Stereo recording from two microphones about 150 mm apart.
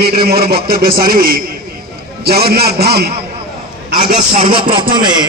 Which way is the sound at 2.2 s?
90° right.